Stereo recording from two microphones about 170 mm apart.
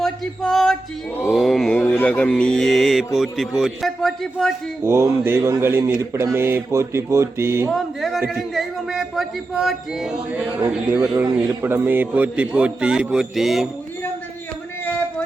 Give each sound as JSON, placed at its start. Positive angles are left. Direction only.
{"t": 0.0, "sound": "music", "side_deg": 0}
{"t": 1.3, "sound": "mantra", "side_deg": 0}
{"t": 4.8, "sound": "speech", "side_deg": -15}
{"t": 7.7, "sound": "mantra", "side_deg": 0}
{"t": 10.7, "sound": "speech", "side_deg": -10}